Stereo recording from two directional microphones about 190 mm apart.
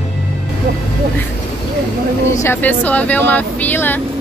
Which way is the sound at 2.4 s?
10° left (ahead or behind).